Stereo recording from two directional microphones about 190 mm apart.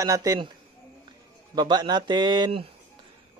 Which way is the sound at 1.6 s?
20° right (ahead or behind).